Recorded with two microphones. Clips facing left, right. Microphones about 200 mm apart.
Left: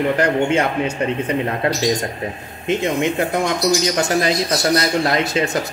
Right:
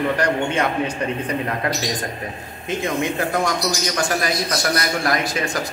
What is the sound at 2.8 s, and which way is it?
A man's voice, 20° left (ahead or behind).